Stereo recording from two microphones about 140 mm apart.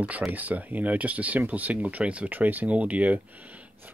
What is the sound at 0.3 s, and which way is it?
Speech, 10° right (ahead or behind).